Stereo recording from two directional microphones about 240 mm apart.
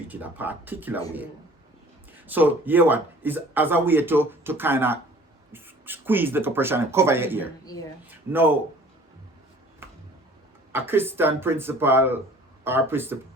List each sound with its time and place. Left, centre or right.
0.1 s speech: centre
2.2 s speech: centre
7.6 s speech: centre
8.1 s speech: centre
10.7 s speech: centre